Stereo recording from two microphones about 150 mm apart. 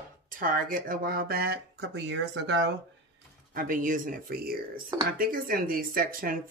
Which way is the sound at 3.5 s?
65° right (ahead or behind).